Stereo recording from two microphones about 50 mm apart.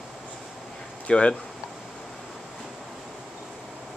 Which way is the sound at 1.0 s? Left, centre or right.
Left.